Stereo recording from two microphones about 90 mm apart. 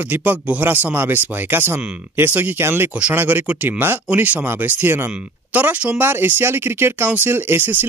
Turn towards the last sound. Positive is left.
turn(degrees=-20)  # may be behind; listen again after turning